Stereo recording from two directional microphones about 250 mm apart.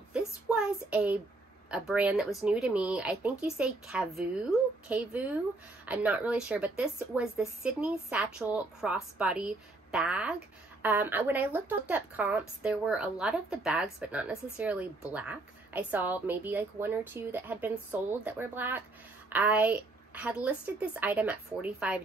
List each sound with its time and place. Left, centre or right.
0.1 s child singing: centre
1.7 s a woman's voice: centre